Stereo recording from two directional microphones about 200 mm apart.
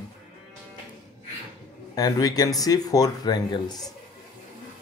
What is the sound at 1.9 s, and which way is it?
Speech, 20° left (ahead or behind).